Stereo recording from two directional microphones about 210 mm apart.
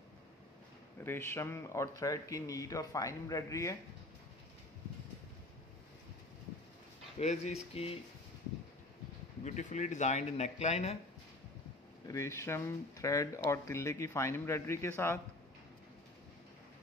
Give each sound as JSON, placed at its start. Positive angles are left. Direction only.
{"t": 1.0, "sound": "speech", "side_deg": 10}
{"t": 7.2, "sound": "speech", "side_deg": 30}
{"t": 9.4, "sound": "speech", "side_deg": 35}
{"t": 12.1, "sound": "speech", "side_deg": 15}